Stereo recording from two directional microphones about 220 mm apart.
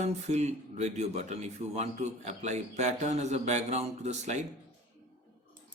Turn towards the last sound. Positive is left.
turn(degrees=-30)  # may be behind; listen again after turning